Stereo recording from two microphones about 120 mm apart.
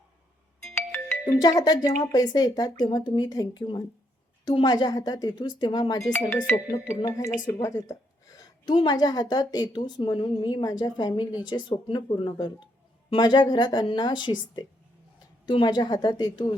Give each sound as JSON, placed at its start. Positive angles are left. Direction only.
{"t": 0.6, "sound": "music", "side_deg": 5}
{"t": 1.4, "sound": "a woman's voice", "side_deg": 30}
{"t": 6.7, "sound": "a woman's voice", "side_deg": 25}